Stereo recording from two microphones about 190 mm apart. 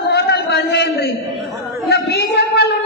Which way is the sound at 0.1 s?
60° left (ahead or behind).